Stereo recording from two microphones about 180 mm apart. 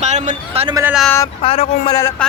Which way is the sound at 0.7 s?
15° right (ahead or behind).